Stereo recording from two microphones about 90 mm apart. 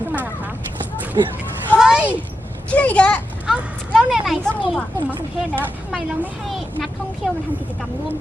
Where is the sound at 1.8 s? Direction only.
10° right (ahead or behind).